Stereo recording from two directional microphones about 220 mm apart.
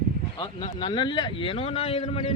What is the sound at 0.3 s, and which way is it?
A man's voice, 20° left (ahead or behind).